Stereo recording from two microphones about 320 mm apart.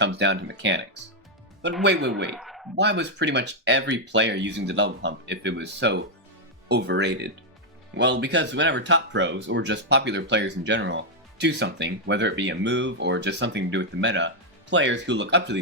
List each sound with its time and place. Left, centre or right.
0.0 s speech: right
2.3 s a sound: centre
2.7 s speech: right